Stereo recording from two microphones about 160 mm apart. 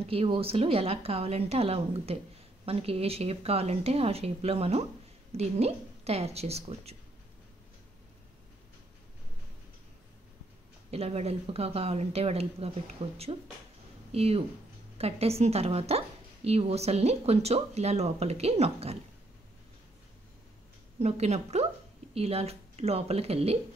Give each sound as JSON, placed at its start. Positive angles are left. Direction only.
{"t": 0.0, "sound": "speech", "side_deg": -35}
{"t": 10.9, "sound": "speech", "side_deg": -40}
{"t": 21.0, "sound": "a woman's voice", "side_deg": -45}